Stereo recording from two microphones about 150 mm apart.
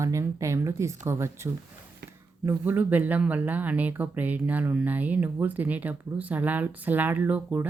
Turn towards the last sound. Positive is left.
turn(degrees=-10)  # may be behind; listen again after turning